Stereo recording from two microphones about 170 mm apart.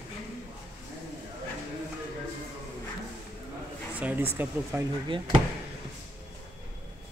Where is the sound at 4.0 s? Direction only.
10° right (ahead or behind).